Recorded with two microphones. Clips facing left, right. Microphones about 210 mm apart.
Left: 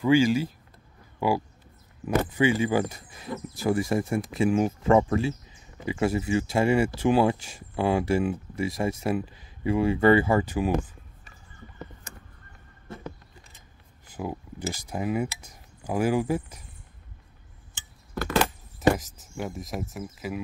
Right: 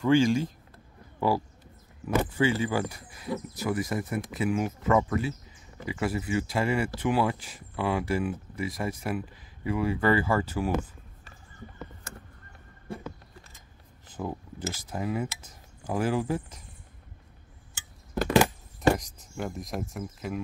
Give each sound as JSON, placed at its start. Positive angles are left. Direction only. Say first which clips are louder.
{"t": 0.0, "sound": "speech", "louder": "left 1 dB", "side_deg": 5}
{"t": 2.0, "sound": "speech", "louder": "left 2 dB", "side_deg": 15}
{"t": 14.0, "sound": "cutlery", "louder": "left 1 dB", "side_deg": 10}
{"t": 17.7, "sound": "a sound", "louder": "right 3 dB", "side_deg": -15}
{"t": 18.9, "sound": "speech", "louder": "left 1 dB", "side_deg": 5}